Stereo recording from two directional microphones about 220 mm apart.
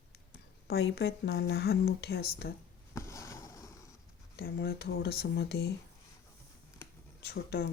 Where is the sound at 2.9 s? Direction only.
15° left (ahead or behind).